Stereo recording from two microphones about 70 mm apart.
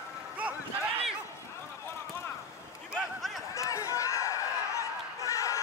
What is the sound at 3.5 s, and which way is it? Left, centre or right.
Chatter, left.